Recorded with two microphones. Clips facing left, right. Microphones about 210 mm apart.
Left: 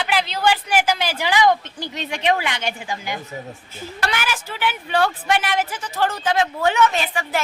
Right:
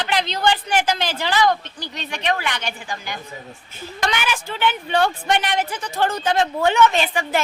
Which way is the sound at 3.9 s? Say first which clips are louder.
Right 2 dB; 5° left (ahead or behind).